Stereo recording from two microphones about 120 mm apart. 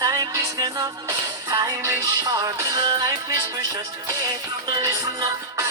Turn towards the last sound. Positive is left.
turn(degrees=-30)  # may be behind; listen again after turning